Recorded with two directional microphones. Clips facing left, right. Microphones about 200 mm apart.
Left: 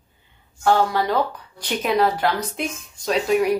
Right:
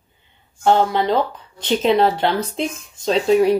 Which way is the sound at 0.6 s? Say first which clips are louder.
Right 3 dB; 20° right (ahead or behind).